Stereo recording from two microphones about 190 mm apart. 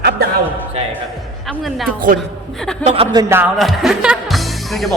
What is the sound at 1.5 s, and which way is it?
A woman's voice, centre (ahead or behind).